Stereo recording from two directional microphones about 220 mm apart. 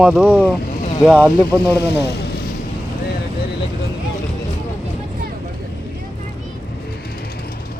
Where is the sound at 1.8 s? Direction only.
50° left (ahead or behind).